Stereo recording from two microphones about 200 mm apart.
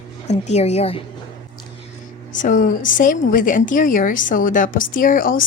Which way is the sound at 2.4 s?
40° left (ahead or behind).